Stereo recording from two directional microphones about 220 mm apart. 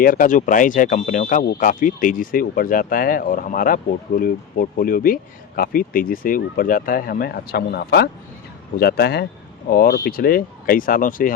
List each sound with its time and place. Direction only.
0.0 s speech: 40° left (ahead or behind)